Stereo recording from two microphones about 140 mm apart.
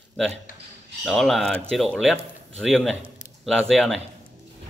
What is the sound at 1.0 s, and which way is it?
A man's voice, centre (ahead or behind).